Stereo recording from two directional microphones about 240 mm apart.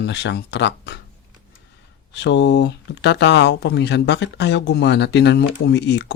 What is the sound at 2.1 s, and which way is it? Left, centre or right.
Speech, left.